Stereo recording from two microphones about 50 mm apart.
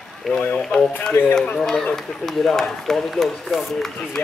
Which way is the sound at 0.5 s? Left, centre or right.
Centre.